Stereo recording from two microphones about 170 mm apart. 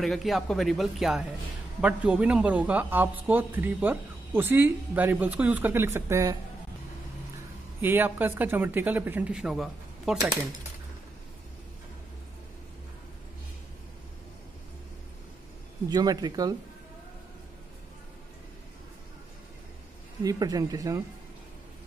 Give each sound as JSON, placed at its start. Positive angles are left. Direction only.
{"t": 0.0, "sound": "speech", "side_deg": 0}
{"t": 7.8, "sound": "speech", "side_deg": -10}
{"t": 15.9, "sound": "speech", "side_deg": -25}
{"t": 20.2, "sound": "speech", "side_deg": -20}